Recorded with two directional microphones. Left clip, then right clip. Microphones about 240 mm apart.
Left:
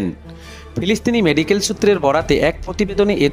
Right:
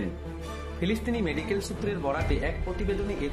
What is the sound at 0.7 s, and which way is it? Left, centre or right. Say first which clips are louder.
Speech: left 13 dB; left.